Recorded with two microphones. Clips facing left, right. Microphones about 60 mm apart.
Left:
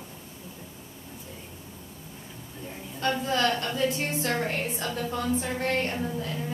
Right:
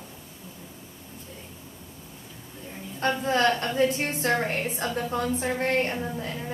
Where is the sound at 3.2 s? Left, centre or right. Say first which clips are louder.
Right 4 dB; right.